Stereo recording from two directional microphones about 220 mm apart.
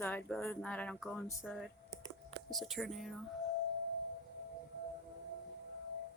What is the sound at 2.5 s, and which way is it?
Speech, centre (ahead or behind).